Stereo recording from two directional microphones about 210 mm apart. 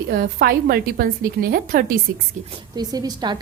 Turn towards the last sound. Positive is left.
turn(degrees=-20)  # may be behind; listen again after turning